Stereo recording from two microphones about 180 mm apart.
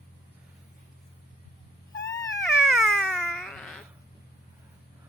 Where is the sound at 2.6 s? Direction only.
Centre (ahead or behind).